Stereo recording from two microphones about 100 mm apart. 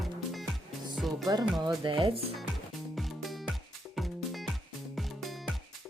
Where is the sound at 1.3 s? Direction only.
40° right (ahead or behind).